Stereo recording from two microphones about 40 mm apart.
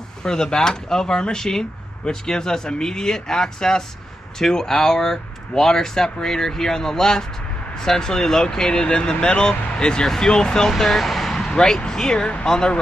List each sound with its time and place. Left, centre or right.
0.2 s speech: centre
10.7 s speech: centre
11.3 s speech: centre